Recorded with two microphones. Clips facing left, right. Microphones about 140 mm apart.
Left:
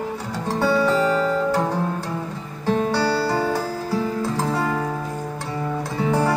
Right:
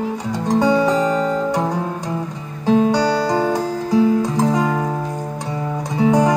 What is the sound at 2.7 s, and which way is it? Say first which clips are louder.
Music: right 5 dB; 15° right (ahead or behind).